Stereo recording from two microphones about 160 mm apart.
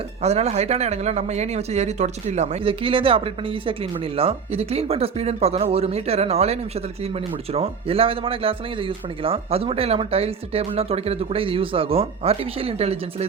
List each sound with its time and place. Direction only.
0.2 s a man's voice: 40° right (ahead or behind)